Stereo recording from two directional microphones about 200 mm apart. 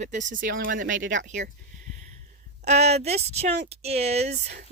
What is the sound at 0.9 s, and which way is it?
Speech, 70° right (ahead or behind).